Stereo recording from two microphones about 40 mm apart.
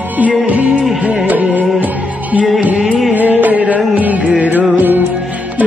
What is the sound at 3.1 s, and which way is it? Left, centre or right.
Music, right.